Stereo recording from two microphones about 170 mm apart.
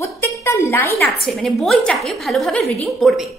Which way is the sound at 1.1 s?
Centre (ahead or behind).